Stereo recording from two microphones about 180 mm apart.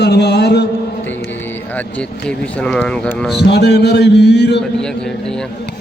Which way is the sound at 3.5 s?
65° left (ahead or behind).